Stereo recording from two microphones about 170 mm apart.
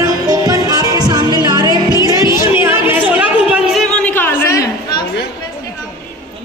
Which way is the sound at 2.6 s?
10° right (ahead or behind).